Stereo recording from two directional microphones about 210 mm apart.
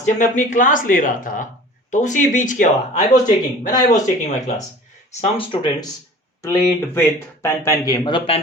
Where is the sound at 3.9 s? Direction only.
35° left (ahead or behind).